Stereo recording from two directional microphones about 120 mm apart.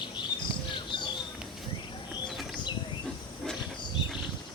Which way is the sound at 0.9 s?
40° left (ahead or behind).